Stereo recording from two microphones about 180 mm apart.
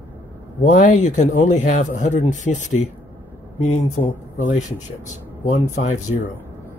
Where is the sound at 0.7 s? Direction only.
45° left (ahead or behind).